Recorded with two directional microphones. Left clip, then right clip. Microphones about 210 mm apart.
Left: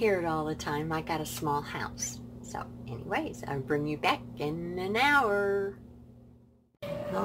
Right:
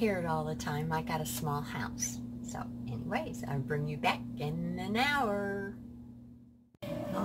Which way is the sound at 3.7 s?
50° left (ahead or behind).